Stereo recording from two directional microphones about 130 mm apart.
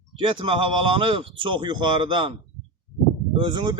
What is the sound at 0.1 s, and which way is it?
Speech, 40° right (ahead or behind).